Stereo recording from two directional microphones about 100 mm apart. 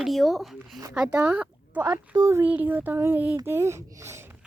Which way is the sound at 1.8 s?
30° right (ahead or behind).